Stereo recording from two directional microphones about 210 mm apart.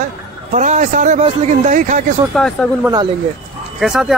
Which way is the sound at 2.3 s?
5° left (ahead or behind).